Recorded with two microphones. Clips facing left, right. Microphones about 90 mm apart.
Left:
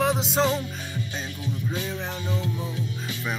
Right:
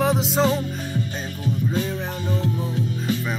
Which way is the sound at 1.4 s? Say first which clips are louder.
Right 7 dB; 45° right (ahead or behind).